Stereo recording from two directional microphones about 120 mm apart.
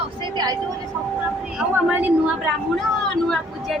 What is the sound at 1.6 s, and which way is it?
Speech, 10° right (ahead or behind).